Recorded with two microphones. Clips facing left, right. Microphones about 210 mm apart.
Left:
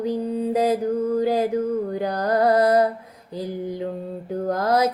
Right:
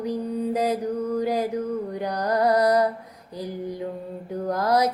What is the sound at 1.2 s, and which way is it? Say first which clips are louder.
Music: left 3 dB; 30° left (ahead or behind).